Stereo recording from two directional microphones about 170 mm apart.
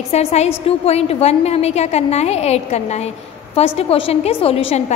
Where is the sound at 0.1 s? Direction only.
40° left (ahead or behind).